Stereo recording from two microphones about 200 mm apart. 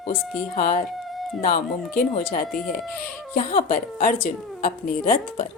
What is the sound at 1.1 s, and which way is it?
Cat, centre (ahead or behind).